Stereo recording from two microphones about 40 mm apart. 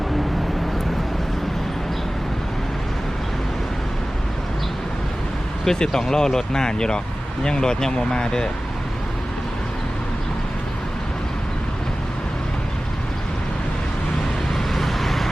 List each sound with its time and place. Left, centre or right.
5.6 s speech: centre
14.7 s vehicle: centre